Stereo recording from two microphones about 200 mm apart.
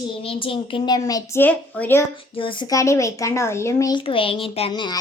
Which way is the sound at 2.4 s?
25° left (ahead or behind).